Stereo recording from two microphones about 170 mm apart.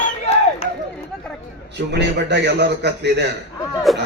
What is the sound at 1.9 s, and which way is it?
A man's voice, 85° right.